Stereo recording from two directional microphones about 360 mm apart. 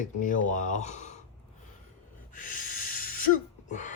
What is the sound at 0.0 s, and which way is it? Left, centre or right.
Speech, left.